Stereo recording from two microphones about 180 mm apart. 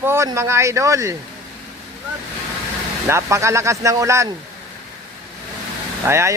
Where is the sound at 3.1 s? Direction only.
15° right (ahead or behind).